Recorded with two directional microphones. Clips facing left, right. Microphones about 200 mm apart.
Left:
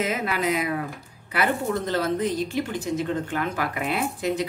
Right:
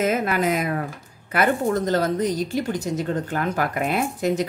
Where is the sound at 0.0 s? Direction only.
50° right (ahead or behind).